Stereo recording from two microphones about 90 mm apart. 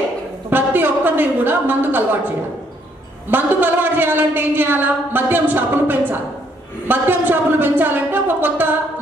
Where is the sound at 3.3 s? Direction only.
20° right (ahead or behind).